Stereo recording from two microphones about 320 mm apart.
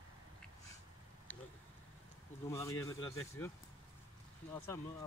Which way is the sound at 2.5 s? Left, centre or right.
Centre.